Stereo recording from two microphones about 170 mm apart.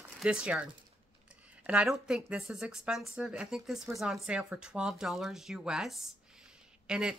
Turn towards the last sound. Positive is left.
turn(degrees=-5)  # may be behind; listen again after turning